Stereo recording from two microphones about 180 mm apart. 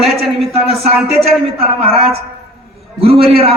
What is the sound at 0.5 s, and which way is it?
A woman's voice, 35° right (ahead or behind).